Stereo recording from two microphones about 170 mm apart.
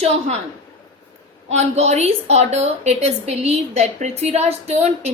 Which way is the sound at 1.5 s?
40° right (ahead or behind).